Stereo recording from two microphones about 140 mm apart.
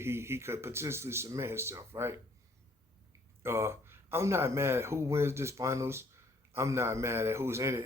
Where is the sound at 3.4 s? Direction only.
20° right (ahead or behind).